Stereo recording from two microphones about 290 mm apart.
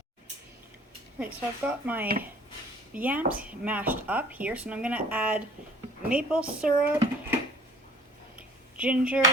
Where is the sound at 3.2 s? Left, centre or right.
Right.